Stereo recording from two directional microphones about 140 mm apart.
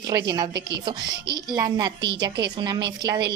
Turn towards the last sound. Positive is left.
turn(degrees=-30)  # may be behind; listen again after turning